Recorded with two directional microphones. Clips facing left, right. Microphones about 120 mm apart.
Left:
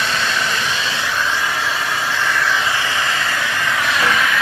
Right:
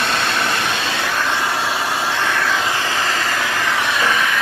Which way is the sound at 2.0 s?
60° right (ahead or behind).